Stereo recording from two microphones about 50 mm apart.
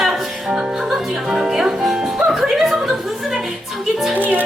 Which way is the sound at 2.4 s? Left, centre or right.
Centre.